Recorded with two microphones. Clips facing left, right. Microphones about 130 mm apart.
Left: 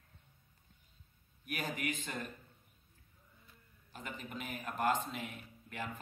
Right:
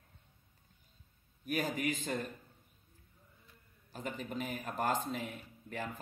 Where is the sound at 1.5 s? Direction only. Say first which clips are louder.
Right 5 dB; 35° right (ahead or behind).